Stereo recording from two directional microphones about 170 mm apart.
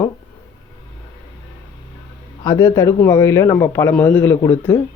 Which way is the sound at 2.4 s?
20° left (ahead or behind).